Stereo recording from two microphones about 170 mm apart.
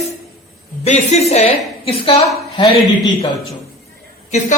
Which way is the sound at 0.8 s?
40° left (ahead or behind).